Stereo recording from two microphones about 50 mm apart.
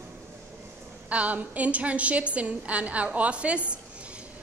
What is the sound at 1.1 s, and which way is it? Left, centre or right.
A woman's voice, right.